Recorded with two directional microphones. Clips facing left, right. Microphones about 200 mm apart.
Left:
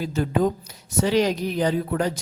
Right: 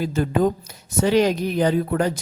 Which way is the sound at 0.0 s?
55° right (ahead or behind).